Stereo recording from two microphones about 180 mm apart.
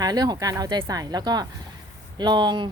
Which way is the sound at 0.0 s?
20° right (ahead or behind).